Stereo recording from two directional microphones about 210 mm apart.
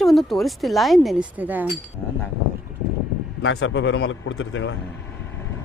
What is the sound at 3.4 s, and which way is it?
Speech, 60° left (ahead or behind).